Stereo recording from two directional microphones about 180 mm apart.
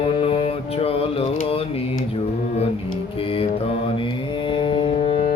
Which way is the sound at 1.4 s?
30° left (ahead or behind).